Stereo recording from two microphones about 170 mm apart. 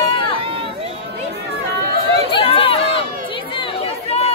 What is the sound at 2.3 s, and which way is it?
Chatter, 35° left (ahead or behind).